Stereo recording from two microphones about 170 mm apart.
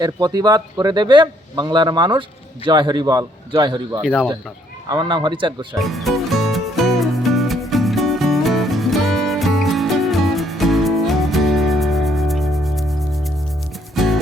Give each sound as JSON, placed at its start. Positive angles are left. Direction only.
{"t": 0.0, "sound": "speech", "side_deg": -25}
{"t": 4.0, "sound": "speech", "side_deg": 0}
{"t": 4.9, "sound": "speech", "side_deg": -25}
{"t": 5.8, "sound": "music", "side_deg": 0}